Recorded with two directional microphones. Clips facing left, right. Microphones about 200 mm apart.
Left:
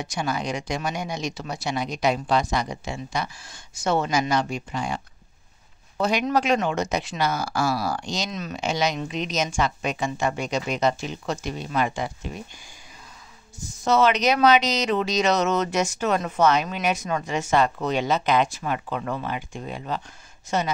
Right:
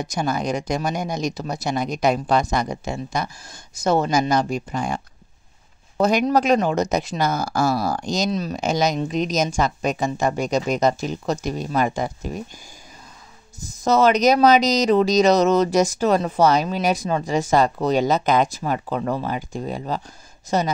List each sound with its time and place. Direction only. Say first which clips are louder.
0.0 s speech: right 4 dB; 40° right (ahead or behind)
13.8 s speech: right 4 dB; 40° right (ahead or behind)